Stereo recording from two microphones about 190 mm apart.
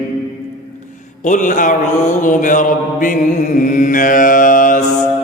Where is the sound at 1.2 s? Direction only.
40° left (ahead or behind).